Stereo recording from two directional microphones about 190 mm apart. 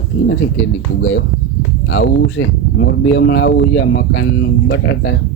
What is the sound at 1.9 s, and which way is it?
Speech, 85° left.